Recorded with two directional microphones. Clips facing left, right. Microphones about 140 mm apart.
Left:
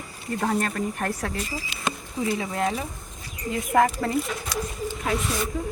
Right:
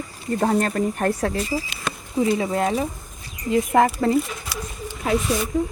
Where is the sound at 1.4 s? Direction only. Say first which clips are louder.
Right 7 dB; 20° right (ahead or behind).